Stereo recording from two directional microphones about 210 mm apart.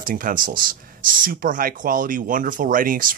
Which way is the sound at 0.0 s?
40° right (ahead or behind).